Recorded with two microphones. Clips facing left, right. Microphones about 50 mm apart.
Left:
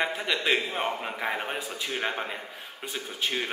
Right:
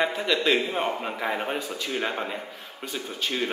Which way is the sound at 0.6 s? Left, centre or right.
Centre.